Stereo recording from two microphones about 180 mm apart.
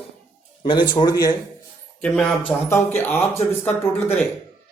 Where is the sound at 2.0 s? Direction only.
5° left (ahead or behind).